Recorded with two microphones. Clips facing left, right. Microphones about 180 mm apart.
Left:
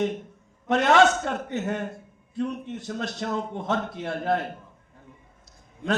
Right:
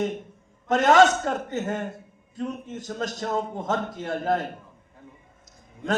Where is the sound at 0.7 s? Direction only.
45° right (ahead or behind).